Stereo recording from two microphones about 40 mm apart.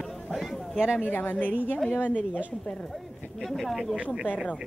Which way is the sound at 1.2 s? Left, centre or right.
Left.